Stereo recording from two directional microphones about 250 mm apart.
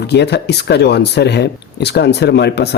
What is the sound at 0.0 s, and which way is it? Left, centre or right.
Speech, left.